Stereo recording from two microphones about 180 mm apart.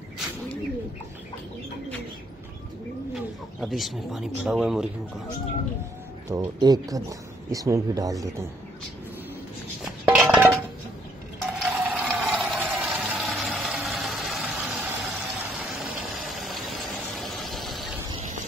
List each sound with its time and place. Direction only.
3.6 s speech: centre (ahead or behind)
6.2 s speech: 20° right (ahead or behind)
10.0 s dishes: 5° right (ahead or behind)
11.6 s a sound: 5° right (ahead or behind)
12.2 s vehicle: 5° right (ahead or behind)
16.4 s a sound: centre (ahead or behind)